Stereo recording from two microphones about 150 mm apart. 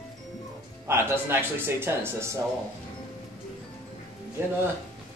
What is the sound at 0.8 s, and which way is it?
Speech, 15° right (ahead or behind).